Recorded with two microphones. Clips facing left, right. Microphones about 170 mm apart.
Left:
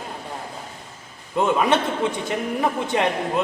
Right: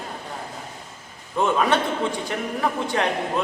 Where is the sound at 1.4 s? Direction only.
15° left (ahead or behind).